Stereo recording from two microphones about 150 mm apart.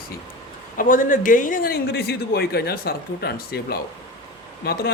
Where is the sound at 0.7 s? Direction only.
65° left (ahead or behind).